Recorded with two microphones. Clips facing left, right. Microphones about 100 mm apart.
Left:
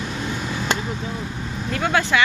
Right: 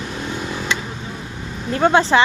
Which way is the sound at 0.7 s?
45° left (ahead or behind).